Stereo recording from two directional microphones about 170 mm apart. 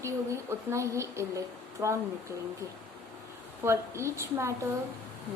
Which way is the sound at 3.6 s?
15° right (ahead or behind).